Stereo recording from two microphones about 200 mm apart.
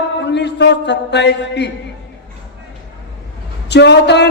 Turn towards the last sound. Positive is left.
turn(degrees=60)  # may be behind; listen again after turning